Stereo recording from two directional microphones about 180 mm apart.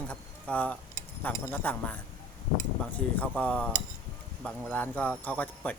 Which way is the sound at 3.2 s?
5° left (ahead or behind).